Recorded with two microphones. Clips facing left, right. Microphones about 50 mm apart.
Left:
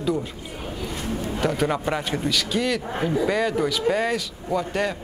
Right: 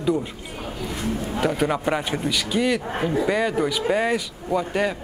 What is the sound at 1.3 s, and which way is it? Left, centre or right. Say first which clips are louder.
Speech: even; centre.